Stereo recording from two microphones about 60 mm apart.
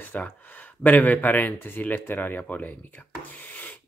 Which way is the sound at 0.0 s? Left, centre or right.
Left.